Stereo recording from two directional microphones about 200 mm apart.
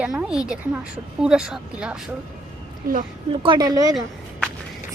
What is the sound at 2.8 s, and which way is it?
Speech, 45° right (ahead or behind).